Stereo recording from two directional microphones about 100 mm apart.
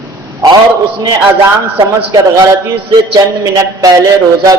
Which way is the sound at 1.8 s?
40° right (ahead or behind).